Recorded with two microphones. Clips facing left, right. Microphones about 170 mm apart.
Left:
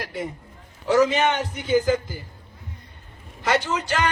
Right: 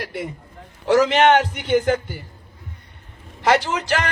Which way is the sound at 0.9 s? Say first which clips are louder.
Right 4 dB; 75° right (ahead or behind).